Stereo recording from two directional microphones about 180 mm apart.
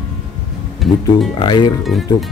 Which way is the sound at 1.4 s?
25° left (ahead or behind).